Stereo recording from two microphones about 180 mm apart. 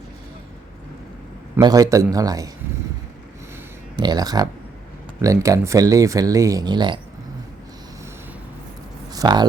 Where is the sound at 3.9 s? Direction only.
25° right (ahead or behind).